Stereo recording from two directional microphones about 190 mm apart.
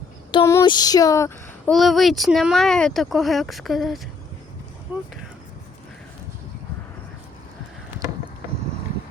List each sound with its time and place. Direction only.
0.6 s speech: 20° left (ahead or behind)
1.7 s speech: centre (ahead or behind)